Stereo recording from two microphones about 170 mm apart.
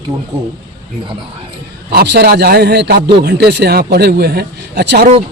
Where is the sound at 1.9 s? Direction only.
70° right (ahead or behind).